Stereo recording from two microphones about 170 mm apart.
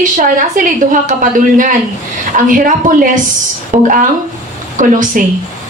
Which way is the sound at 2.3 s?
50° right (ahead or behind).